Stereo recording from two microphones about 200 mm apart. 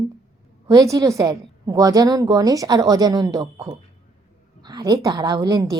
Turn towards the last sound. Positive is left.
turn(degrees=-20)  # may be behind; listen again after turning